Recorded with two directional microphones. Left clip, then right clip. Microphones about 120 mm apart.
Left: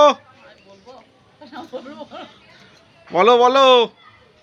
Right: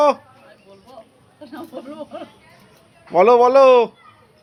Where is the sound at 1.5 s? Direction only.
35° left (ahead or behind).